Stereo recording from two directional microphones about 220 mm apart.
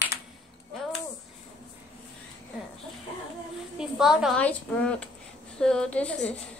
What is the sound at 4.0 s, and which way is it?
A woman's voice, centre (ahead or behind).